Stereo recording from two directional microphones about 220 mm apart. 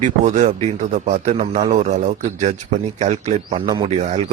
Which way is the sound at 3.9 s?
30° right (ahead or behind).